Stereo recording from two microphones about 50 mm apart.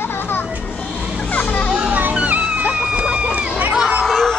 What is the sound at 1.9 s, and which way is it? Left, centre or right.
Music, right.